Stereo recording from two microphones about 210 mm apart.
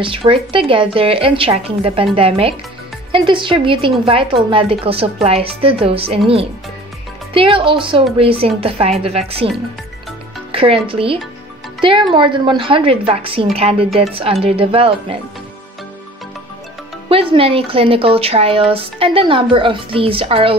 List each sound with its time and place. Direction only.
0.0 s speech: 25° right (ahead or behind)
10.5 s speech: 25° right (ahead or behind)
17.1 s speech: 25° right (ahead or behind)